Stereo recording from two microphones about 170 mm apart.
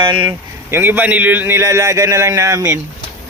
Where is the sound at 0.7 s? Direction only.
10° right (ahead or behind).